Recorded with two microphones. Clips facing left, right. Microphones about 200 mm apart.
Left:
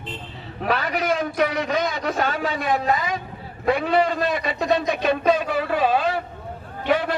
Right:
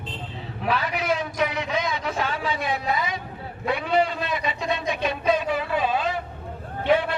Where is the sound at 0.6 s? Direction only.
45° left (ahead or behind).